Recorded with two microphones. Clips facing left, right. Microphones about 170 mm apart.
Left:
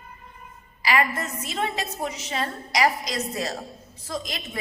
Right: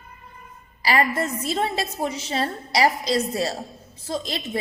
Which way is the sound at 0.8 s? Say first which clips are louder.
Right 2 dB; 35° right (ahead or behind).